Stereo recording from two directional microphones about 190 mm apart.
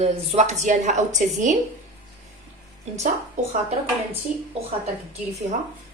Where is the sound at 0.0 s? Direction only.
35° right (ahead or behind).